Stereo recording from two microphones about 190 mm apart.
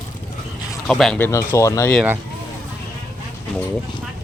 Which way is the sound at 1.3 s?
15° left (ahead or behind).